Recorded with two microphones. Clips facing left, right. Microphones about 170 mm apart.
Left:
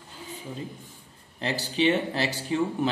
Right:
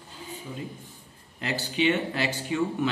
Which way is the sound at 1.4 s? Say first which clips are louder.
Left 1 dB; 35° left (ahead or behind).